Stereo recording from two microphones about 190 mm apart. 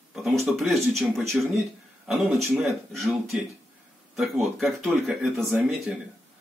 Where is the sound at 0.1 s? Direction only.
Centre (ahead or behind).